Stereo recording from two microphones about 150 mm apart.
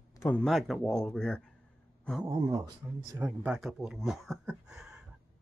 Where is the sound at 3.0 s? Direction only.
20° right (ahead or behind).